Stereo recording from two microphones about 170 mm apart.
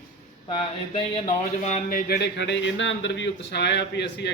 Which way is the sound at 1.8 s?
60° left (ahead or behind).